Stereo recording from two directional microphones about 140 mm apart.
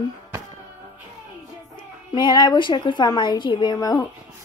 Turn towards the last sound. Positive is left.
turn(degrees=30)  # may be behind; listen again after turning